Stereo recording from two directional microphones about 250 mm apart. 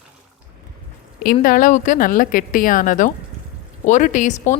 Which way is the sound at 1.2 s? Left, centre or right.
Left.